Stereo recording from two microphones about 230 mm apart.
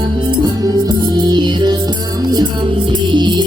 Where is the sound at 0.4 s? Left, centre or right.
Centre.